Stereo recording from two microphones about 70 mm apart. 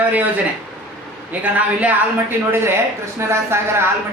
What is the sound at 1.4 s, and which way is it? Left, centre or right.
Speech, right.